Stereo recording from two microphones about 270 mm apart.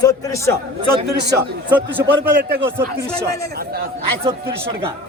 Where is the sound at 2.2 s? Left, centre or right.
Right.